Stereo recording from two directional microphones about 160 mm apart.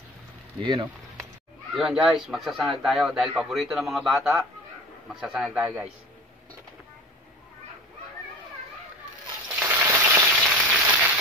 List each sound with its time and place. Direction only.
0.6 s speech: 35° right (ahead or behind)
1.8 s speech: 5° right (ahead or behind)
9.6 s a sound: 10° right (ahead or behind)
10.3 s frying: 5° right (ahead or behind)